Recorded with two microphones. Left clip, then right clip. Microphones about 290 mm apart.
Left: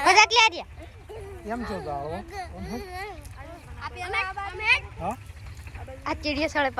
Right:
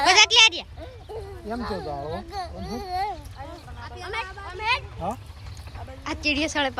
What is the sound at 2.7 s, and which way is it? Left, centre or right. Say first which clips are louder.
Speech: right 11 dB; right.